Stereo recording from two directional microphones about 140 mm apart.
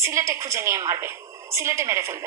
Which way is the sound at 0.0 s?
20° right (ahead or behind).